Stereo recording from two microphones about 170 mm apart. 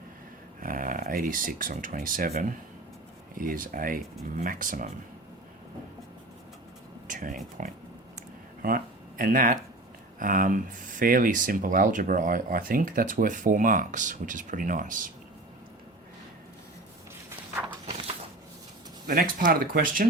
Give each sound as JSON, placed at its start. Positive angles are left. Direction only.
{"t": 0.6, "sound": "speech", "side_deg": -55}
{"t": 7.1, "sound": "speech", "side_deg": -50}
{"t": 17.2, "sound": "walk", "side_deg": -10}
{"t": 19.0, "sound": "speech", "side_deg": -55}